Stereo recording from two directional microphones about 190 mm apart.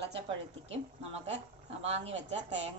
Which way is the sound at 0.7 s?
35° right (ahead or behind).